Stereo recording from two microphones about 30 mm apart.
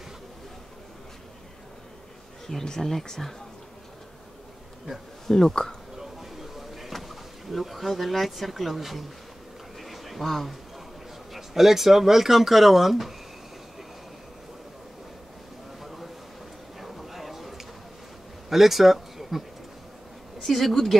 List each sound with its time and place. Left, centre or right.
2.6 s speech: centre
5.2 s speech: centre
5.9 s a sound: centre
6.9 s speech: centre
9.8 s a sound: centre
11.3 s speech: centre
15.8 s a sound: centre
18.5 s speech: centre
20.4 s speech: centre